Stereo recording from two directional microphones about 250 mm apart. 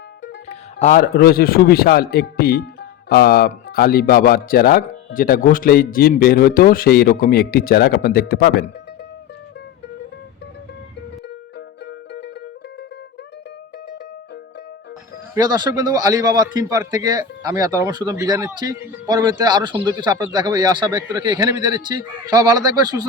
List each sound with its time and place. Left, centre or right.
0.4 s speech: left
11.9 s music: left
15.4 s a man's voice: centre